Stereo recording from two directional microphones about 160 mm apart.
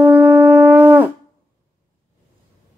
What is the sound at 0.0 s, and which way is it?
Shofar, 10° right (ahead or behind).